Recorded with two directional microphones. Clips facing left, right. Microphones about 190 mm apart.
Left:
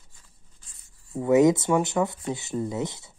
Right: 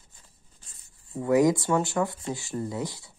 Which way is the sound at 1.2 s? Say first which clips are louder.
Left 3 dB; 20° left (ahead or behind).